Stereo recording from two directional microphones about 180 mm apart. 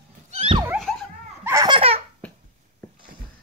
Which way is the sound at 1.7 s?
30° right (ahead or behind).